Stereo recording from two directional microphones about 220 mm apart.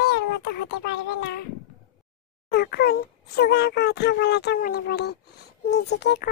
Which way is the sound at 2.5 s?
45° left (ahead or behind).